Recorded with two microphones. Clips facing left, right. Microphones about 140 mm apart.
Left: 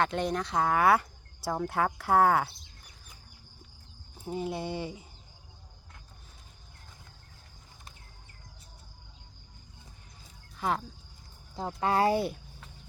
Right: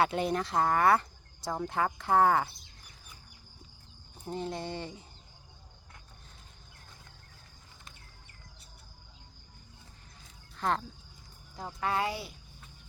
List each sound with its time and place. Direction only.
0.0 s speech: 5° right (ahead or behind)
4.3 s speech: 10° left (ahead or behind)
10.6 s speech: 5° left (ahead or behind)
11.5 s speech: 30° left (ahead or behind); by 12.4 s 50° left (ahead or behind)